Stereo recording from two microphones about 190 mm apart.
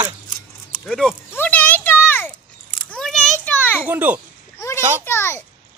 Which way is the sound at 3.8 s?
10° right (ahead or behind).